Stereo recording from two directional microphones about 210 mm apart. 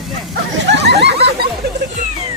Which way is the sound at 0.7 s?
55° right (ahead or behind).